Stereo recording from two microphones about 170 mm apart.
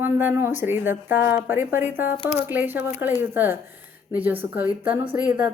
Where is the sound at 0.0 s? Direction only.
10° right (ahead or behind).